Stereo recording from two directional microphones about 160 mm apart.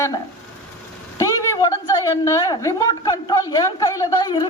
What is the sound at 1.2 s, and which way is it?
A woman's voice, 20° left (ahead or behind).